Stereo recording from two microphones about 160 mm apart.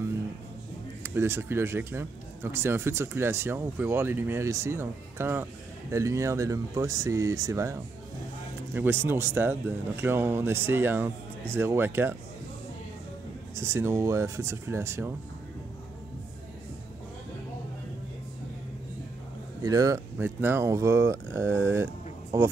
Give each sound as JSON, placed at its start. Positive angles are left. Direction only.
{"t": 1.0, "sound": "speech", "side_deg": -15}
{"t": 13.6, "sound": "speech", "side_deg": -15}
{"t": 19.6, "sound": "speech", "side_deg": -20}